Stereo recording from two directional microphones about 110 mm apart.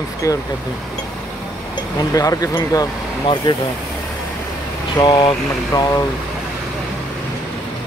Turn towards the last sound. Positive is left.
turn(degrees=30)  # may be behind; listen again after turning